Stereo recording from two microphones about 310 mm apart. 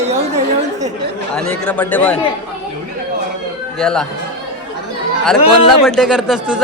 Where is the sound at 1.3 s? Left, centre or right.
Centre.